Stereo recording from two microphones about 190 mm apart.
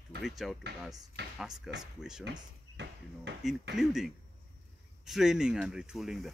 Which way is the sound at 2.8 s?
65° right (ahead or behind).